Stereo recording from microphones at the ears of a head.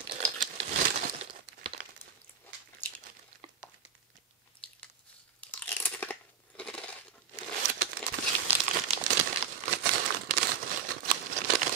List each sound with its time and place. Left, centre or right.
0.0 s crumpling: right
3.0 s a sound: right
5.5 s crunch: centre
7.5 s crumpling: right